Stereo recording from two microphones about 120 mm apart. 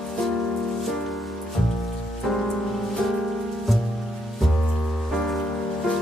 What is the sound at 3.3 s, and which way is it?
Music, centre (ahead or behind).